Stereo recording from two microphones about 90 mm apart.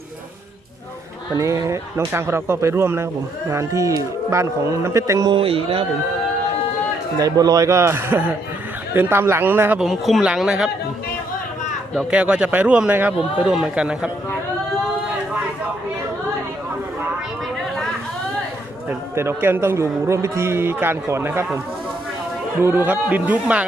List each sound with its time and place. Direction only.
1.4 s a man's voice: 35° right (ahead or behind)
5.3 s a man's voice: 90° right
7.2 s a man's voice: 45° right (ahead or behind); by 9.7 s 20° right (ahead or behind)
9.8 s speech: centre (ahead or behind)
12.1 s speech: 15° right (ahead or behind)
18.9 s a man's voice: 25° right (ahead or behind)
22.6 s a man's voice: 25° right (ahead or behind)